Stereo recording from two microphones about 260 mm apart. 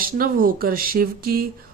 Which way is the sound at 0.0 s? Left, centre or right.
Right.